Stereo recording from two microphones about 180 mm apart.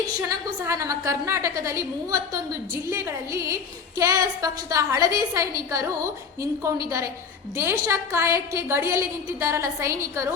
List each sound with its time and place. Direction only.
0.2 s a woman's voice: 15° right (ahead or behind)